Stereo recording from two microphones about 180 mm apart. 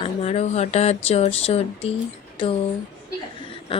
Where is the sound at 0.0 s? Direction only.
35° left (ahead or behind).